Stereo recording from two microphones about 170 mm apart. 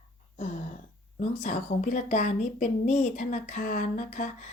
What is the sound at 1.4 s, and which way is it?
Speech, 45° left (ahead or behind).